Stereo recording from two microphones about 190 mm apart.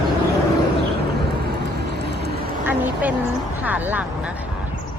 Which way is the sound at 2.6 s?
10° right (ahead or behind).